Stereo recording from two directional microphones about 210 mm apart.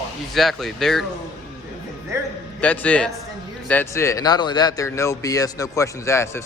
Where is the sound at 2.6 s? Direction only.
5° left (ahead or behind).